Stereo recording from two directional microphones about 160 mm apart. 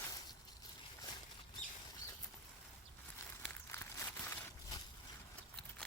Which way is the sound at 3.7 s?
15° left (ahead or behind).